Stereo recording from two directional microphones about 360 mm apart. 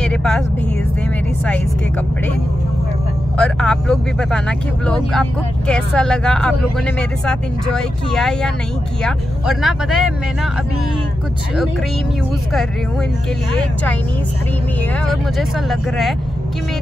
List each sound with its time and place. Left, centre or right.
0.0 s vehicle: centre
3.3 s speech: centre
15.0 s speech: centre